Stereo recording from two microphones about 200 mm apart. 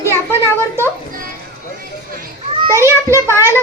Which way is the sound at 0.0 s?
15° left (ahead or behind).